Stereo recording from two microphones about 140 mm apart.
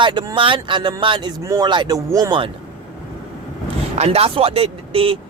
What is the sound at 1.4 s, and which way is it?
Speech, 25° right (ahead or behind).